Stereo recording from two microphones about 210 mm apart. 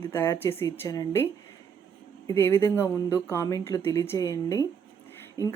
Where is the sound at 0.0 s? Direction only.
10° left (ahead or behind).